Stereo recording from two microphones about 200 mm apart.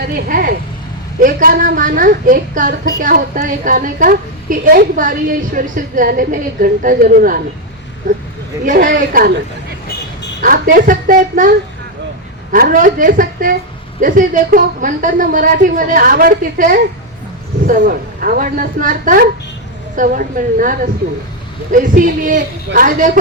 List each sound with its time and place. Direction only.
0.3 s a woman's voice: 45° right (ahead or behind)
10.4 s a woman's voice: 45° right (ahead or behind)